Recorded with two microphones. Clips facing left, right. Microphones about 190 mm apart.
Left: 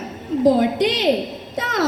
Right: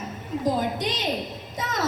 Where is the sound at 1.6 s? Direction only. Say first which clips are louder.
Left 7 dB; 70° left (ahead or behind).